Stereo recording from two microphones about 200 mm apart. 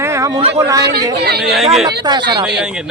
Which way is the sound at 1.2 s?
55° right (ahead or behind).